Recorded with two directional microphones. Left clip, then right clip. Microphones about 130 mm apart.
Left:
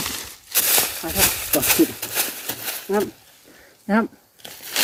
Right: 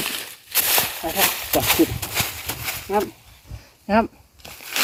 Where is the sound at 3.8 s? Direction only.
90° left.